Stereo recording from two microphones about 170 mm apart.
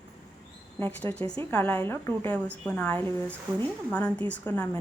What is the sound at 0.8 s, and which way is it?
A woman's voice, 10° left (ahead or behind).